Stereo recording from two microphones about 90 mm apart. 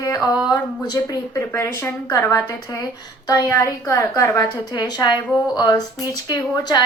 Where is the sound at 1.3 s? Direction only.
25° left (ahead or behind).